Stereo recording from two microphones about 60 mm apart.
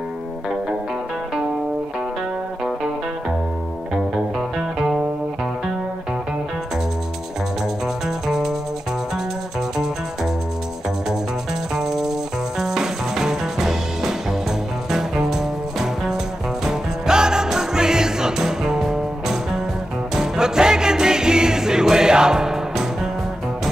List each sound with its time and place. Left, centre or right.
4.4 s music: centre
7.8 s music: centre
11.7 s music: centre